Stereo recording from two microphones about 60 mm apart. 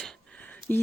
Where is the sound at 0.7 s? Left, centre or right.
Left.